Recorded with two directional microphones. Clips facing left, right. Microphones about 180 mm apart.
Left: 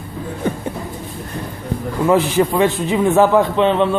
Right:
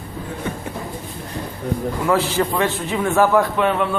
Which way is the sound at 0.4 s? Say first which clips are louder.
Left 7 dB; 35° left (ahead or behind).